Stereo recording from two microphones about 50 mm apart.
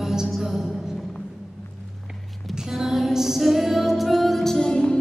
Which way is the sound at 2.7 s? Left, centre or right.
Centre.